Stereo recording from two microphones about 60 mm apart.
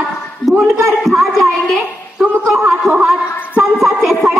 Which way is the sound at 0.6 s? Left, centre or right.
Right.